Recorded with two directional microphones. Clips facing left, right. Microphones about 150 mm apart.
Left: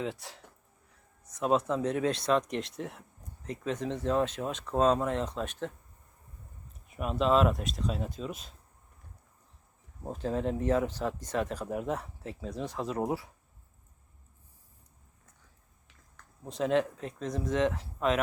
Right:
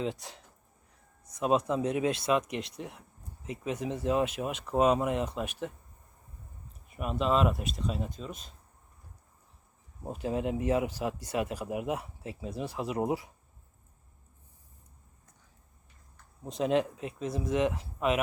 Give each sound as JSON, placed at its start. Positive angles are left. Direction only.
{"t": 0.0, "sound": "speech", "side_deg": -20}
{"t": 6.8, "sound": "speech", "side_deg": 0}
{"t": 10.0, "sound": "speech", "side_deg": -10}
{"t": 16.4, "sound": "speech", "side_deg": -15}